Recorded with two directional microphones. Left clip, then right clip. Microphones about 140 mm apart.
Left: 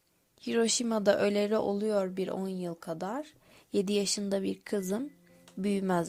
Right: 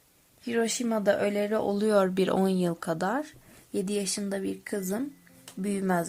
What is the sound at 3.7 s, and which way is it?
Speech, 35° left (ahead or behind).